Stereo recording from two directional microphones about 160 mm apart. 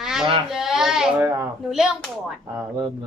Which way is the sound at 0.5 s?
5° right (ahead or behind).